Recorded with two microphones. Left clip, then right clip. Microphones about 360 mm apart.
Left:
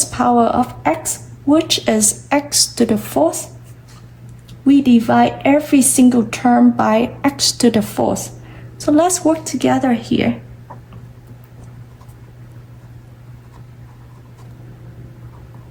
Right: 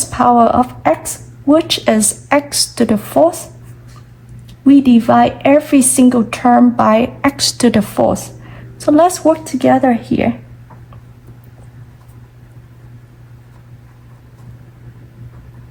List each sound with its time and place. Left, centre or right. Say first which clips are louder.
0.0 s a woman's voice: right 4 dB; centre
4.6 s a woman's voice: right 3 dB; centre